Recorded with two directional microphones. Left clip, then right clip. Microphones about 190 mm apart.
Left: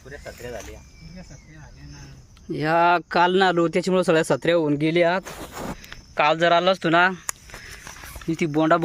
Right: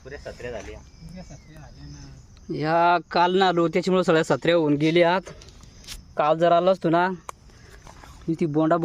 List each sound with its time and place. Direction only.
0.4 s speech: 25° right (ahead or behind)
2.5 s speech: centre (ahead or behind); by 7.2 s 20° right (ahead or behind)
8.5 s speech: 20° right (ahead or behind)